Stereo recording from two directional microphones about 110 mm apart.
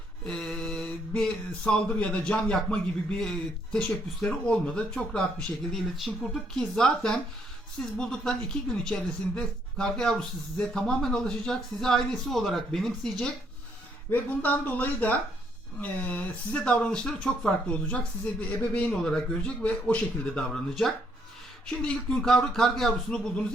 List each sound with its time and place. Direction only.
0.3 s mantra: 5° left (ahead or behind)
6.6 s speech: 5° left (ahead or behind)
14.1 s mantra: 15° left (ahead or behind)
21.8 s speech: 5° left (ahead or behind)